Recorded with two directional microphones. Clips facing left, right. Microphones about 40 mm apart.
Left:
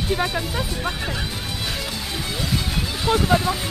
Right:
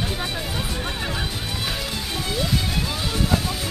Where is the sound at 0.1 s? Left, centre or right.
Centre.